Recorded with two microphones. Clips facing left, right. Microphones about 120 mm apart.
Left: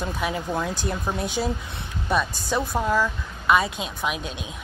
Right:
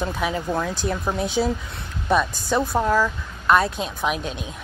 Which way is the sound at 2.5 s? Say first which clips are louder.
Right 4 dB; 15° right (ahead or behind).